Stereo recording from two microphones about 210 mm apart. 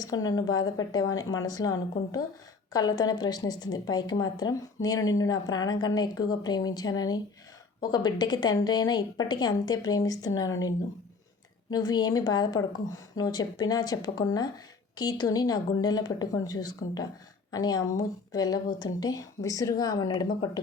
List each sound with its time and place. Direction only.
0.0 s a woman's voice: 20° left (ahead or behind)
10.5 s speech: 70° left (ahead or behind)
11.7 s a woman's voice: 20° left (ahead or behind)